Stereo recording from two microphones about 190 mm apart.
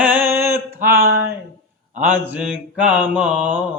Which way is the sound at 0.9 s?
50° right (ahead or behind).